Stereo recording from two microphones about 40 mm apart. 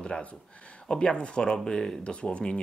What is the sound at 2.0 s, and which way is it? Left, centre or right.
Speech, left.